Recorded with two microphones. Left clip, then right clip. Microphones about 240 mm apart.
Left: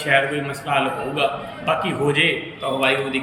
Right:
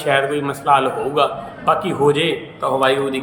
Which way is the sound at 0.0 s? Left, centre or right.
Centre.